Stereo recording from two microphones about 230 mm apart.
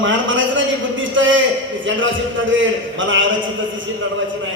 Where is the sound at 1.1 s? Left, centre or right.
Right.